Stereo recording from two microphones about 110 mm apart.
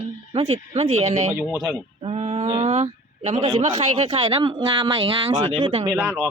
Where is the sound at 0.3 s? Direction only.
70° right (ahead or behind); by 1.3 s 90° right.